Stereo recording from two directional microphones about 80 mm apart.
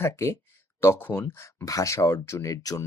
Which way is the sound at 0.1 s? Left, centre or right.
Left.